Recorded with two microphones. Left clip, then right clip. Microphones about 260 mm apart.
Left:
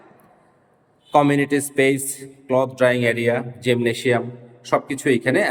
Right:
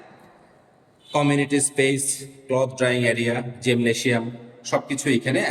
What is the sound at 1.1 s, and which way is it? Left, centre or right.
A man's voice, centre.